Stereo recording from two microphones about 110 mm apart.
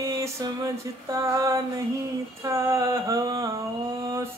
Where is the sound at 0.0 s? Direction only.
30° right (ahead or behind).